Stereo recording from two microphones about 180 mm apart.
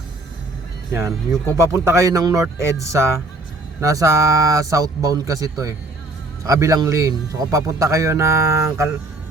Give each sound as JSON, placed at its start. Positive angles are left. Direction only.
{"t": 1.5, "sound": "a man's voice", "side_deg": -15}